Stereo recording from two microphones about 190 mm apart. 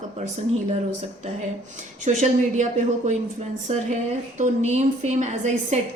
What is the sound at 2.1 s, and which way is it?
A woman's voice, 40° right (ahead or behind).